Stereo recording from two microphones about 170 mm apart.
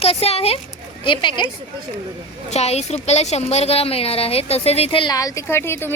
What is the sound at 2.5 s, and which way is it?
A woman's voice, 40° left (ahead or behind).